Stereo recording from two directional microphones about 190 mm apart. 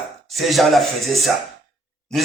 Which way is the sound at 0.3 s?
Centre (ahead or behind).